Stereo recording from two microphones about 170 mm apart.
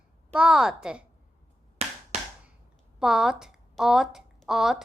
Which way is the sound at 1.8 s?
40° right (ahead or behind).